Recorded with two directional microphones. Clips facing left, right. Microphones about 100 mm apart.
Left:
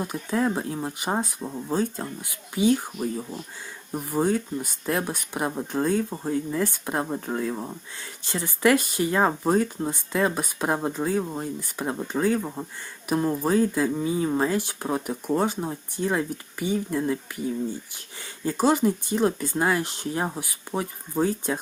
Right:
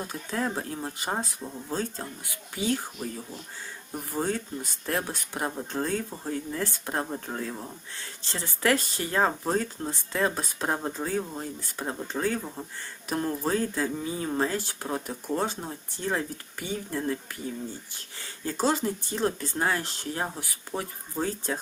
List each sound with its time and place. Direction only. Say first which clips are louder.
0.0 s speech: left 5 dB; 15° left (ahead or behind)
7.5 s speech: left 5 dB; 25° left (ahead or behind)